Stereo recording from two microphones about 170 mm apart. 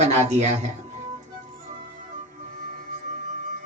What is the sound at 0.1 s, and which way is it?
Speech, 40° right (ahead or behind).